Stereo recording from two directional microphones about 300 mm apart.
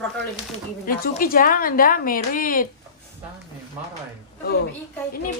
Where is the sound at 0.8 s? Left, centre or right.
Left.